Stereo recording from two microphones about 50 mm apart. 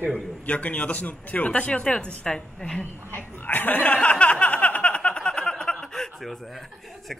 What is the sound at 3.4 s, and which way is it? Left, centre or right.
Speech, left.